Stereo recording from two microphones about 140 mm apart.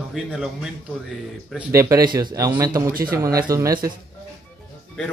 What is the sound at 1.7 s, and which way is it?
Speech, 20° right (ahead or behind).